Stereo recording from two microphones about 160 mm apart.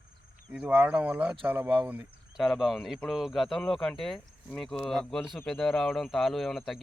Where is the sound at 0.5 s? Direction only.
5° right (ahead or behind).